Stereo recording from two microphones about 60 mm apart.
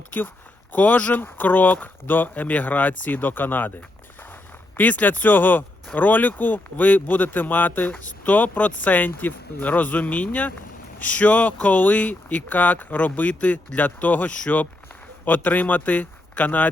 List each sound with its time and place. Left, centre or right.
0.7 s speech: left
4.8 s a man's voice: left